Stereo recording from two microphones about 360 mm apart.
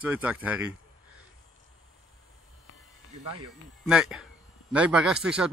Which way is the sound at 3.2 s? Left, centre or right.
Right.